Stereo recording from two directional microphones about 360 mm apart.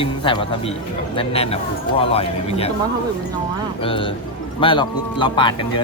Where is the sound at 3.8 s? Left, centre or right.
Centre.